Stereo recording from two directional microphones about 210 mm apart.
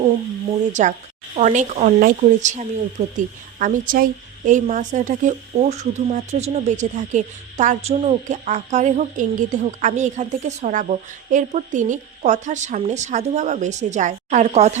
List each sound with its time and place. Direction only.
0.7 s a woman's voice: 35° right (ahead or behind)